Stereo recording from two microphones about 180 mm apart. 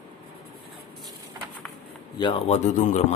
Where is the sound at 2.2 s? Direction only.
35° left (ahead or behind).